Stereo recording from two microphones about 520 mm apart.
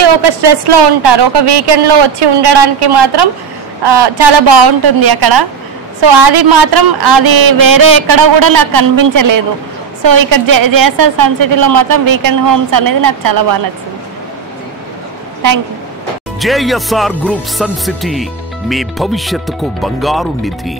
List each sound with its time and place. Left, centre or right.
0.0 s a woman's voice: right
16.3 s speech: centre